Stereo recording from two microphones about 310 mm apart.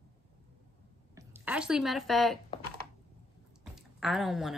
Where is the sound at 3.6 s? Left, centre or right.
Centre.